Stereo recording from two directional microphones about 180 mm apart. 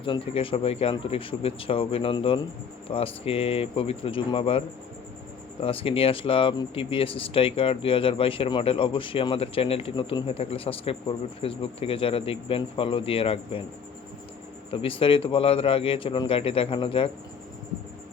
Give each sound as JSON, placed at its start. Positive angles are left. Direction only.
{"t": 0.0, "sound": "speech", "side_deg": 30}
{"t": 5.6, "sound": "speech", "side_deg": 30}
{"t": 14.7, "sound": "speech", "side_deg": 30}